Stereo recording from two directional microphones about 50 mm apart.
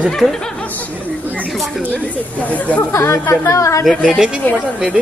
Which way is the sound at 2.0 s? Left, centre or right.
Left.